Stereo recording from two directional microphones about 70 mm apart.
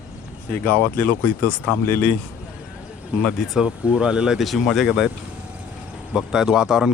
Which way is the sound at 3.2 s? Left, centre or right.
Centre.